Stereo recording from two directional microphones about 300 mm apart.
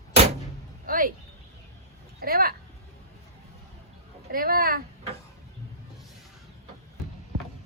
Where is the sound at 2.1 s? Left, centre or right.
Right.